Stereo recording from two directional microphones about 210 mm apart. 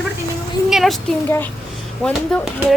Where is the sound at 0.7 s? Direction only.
Centre (ahead or behind).